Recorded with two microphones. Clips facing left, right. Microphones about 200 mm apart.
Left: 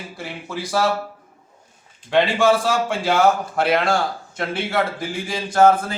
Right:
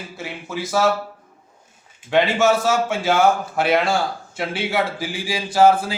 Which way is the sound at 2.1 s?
5° right (ahead or behind).